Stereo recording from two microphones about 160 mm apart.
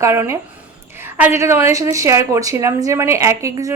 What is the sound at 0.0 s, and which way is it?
A woman's voice, 15° right (ahead or behind).